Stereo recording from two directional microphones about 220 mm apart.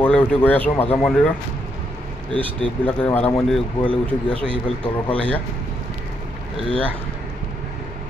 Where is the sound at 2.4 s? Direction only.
5° left (ahead or behind).